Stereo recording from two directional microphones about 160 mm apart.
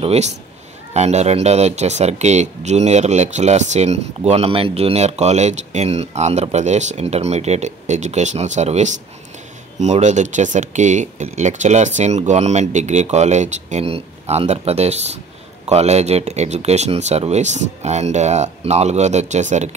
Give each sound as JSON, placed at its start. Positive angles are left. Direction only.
{"t": 0.0, "sound": "speech", "side_deg": -40}